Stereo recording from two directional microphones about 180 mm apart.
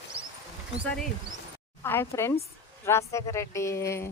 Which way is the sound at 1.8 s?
15° left (ahead or behind).